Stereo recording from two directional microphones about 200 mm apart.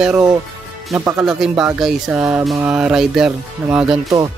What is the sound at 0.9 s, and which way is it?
Speech, 5° right (ahead or behind).